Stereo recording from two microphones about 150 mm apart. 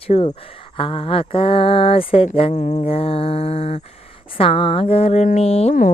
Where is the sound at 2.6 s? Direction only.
50° left (ahead or behind).